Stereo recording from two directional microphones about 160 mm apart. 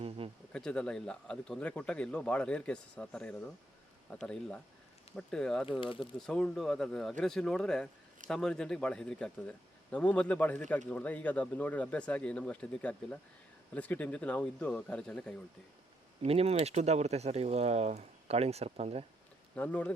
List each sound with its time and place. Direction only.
0.5 s speech: 5° left (ahead or behind)
5.8 s speech: 35° left (ahead or behind)
6.1 s speech: 5° left (ahead or behind)
16.2 s speech: 40° right (ahead or behind)
19.5 s speech: 10° left (ahead or behind)